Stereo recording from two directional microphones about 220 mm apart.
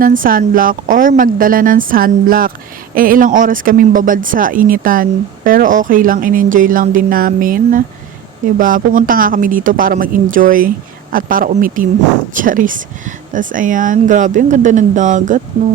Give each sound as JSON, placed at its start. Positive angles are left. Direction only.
{"t": 0.0, "sound": "speech", "side_deg": -40}